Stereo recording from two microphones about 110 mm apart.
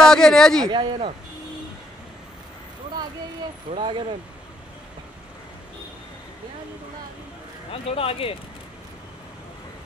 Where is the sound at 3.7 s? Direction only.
55° right (ahead or behind).